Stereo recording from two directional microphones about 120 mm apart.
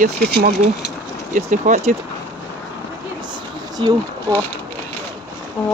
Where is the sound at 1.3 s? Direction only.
90° right.